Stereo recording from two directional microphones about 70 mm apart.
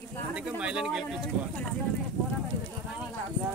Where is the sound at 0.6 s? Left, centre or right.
Centre.